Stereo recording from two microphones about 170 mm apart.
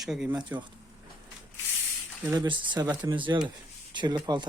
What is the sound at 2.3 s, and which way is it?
Speech, 25° right (ahead or behind).